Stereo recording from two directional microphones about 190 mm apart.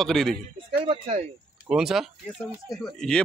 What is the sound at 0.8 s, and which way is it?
Speech, 30° right (ahead or behind).